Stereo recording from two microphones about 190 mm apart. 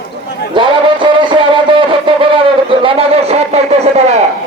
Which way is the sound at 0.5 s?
25° right (ahead or behind).